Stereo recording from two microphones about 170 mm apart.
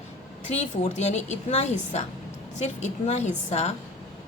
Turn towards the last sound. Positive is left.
turn(degrees=40)  # may be behind; listen again after turning